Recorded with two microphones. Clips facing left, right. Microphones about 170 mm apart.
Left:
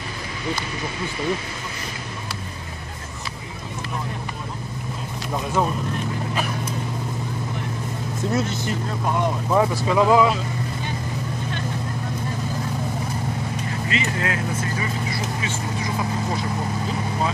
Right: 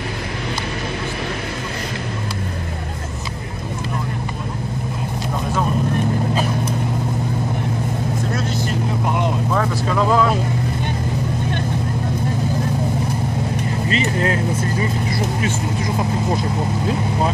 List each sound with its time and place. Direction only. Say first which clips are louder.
8.3 s vehicle: right 1 dB; 20° left (ahead or behind)
9.0 s vehicle: even; 15° right (ahead or behind)
9.5 s speech: left 1 dB; 15° left (ahead or behind)
13.8 s speech: right 5 dB; 35° right (ahead or behind)